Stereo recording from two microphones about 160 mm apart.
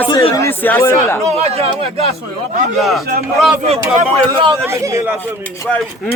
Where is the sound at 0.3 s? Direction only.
15° left (ahead or behind).